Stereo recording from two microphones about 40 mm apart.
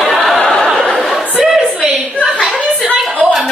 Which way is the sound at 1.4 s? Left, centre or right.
Centre.